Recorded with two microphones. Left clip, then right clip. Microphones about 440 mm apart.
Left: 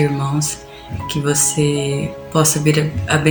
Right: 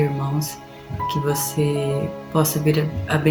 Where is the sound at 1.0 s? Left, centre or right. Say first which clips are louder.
Left 4 dB; right.